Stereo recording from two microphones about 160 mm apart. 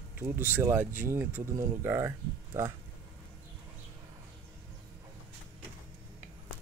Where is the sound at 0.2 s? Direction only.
15° right (ahead or behind).